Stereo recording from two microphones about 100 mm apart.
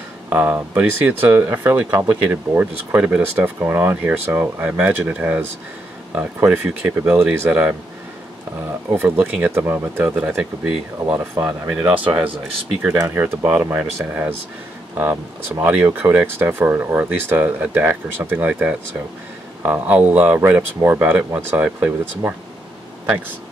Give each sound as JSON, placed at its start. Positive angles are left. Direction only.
{"t": 0.3, "sound": "speech", "side_deg": -20}
{"t": 8.9, "sound": "speech", "side_deg": -20}
{"t": 11.4, "sound": "speech", "side_deg": -30}
{"t": 11.7, "sound": "speech", "side_deg": -15}
{"t": 12.9, "sound": "speech", "side_deg": -35}